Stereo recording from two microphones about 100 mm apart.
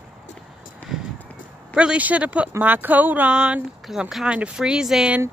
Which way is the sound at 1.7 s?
10° right (ahead or behind).